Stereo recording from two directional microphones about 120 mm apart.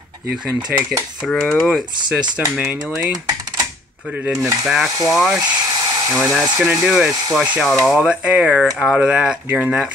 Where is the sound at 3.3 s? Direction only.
30° right (ahead or behind).